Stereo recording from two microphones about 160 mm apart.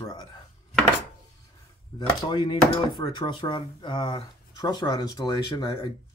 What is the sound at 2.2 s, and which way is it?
Speech, 25° left (ahead or behind).